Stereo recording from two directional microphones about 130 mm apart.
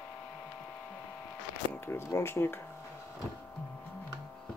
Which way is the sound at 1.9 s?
20° left (ahead or behind).